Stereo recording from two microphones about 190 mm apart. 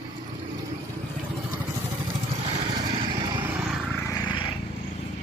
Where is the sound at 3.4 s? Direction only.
5° right (ahead or behind).